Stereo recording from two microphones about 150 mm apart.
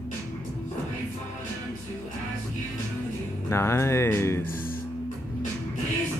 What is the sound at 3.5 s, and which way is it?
Speech, 15° left (ahead or behind).